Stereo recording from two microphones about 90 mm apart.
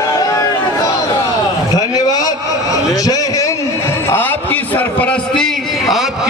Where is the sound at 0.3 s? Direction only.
40° left (ahead or behind).